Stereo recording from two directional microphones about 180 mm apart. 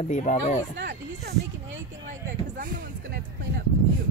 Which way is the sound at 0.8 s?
65° right (ahead or behind).